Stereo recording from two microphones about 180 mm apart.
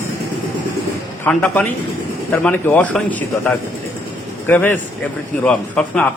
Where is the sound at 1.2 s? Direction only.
5° left (ahead or behind).